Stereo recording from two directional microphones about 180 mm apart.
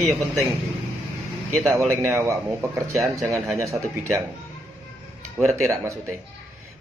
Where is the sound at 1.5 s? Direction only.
Centre (ahead or behind).